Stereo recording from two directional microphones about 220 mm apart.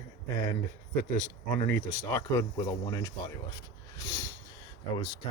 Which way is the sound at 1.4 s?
10° left (ahead or behind).